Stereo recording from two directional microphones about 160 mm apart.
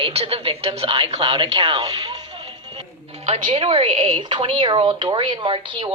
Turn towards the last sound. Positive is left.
turn(degrees=-30)  # may be behind; listen again after turning